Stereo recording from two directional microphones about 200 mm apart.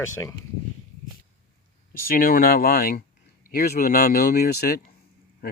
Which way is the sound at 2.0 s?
45° left (ahead or behind).